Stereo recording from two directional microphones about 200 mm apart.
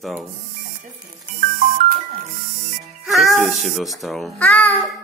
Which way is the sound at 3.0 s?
Centre (ahead or behind).